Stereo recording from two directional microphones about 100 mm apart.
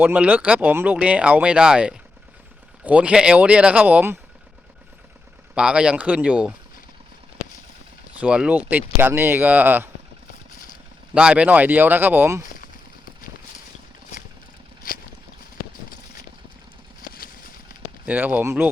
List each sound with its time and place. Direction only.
0.0 s speech: 15° right (ahead or behind)
5.5 s speech: 10° right (ahead or behind)
8.2 s speech: 10° right (ahead or behind)
11.1 s speech: 10° right (ahead or behind)
18.0 s speech: 15° right (ahead or behind)